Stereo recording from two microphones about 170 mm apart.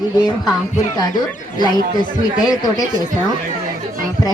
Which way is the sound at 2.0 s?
25° left (ahead or behind).